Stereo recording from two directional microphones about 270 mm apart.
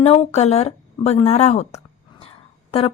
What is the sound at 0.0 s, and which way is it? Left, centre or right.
A woman's voice, left.